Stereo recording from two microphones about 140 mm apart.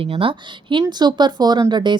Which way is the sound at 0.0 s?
40° right (ahead or behind).